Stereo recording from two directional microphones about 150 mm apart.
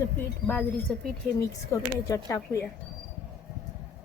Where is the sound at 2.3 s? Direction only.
20° left (ahead or behind).